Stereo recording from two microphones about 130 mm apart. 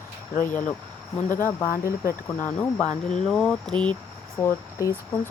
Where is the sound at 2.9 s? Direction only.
65° left (ahead or behind).